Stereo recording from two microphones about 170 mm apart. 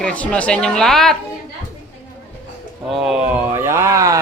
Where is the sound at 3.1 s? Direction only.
5° right (ahead or behind).